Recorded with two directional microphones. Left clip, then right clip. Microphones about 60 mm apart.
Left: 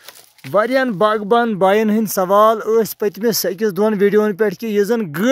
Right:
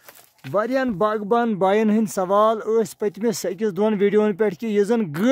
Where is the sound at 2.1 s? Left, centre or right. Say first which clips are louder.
Left 6 dB; left.